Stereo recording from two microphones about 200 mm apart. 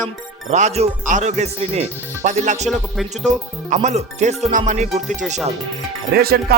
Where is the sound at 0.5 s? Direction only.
35° right (ahead or behind).